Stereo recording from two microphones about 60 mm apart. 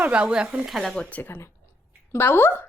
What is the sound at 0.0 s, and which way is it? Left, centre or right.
Speech, centre.